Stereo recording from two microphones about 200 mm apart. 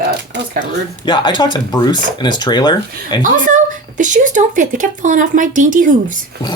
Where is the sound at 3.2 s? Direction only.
40° right (ahead or behind).